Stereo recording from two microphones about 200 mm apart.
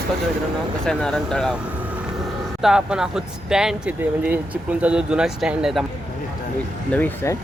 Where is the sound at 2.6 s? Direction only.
5° right (ahead or behind).